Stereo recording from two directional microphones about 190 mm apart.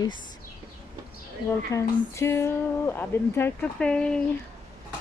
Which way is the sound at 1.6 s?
15° left (ahead or behind).